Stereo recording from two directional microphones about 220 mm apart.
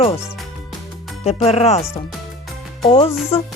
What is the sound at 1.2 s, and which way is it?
Speech, 30° left (ahead or behind).